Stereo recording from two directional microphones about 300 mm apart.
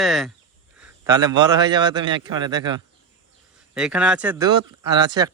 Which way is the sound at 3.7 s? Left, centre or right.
Centre.